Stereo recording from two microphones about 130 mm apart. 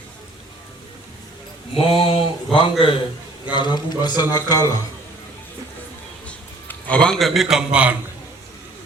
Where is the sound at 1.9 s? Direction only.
45° left (ahead or behind).